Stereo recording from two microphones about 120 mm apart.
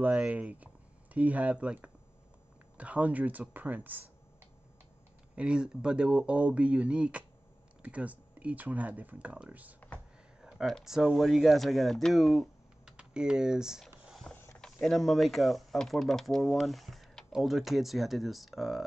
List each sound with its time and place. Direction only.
0.0 s speech: 10° right (ahead or behind)
5.3 s speech: 10° right (ahead or behind)
10.4 s speech: 5° right (ahead or behind)
14.0 s a sound: centre (ahead or behind)
14.3 s a sound: 20° left (ahead or behind)
14.6 s speech: 5° left (ahead or behind)